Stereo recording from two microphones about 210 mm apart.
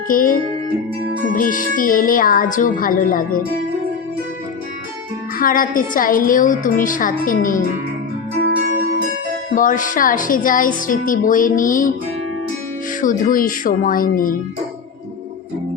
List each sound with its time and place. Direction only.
0.1 s a woman's voice: 40° left (ahead or behind)
5.4 s a woman's voice: 40° left (ahead or behind)
9.6 s a woman's voice: 40° left (ahead or behind)
13.0 s a woman's voice: 40° left (ahead or behind)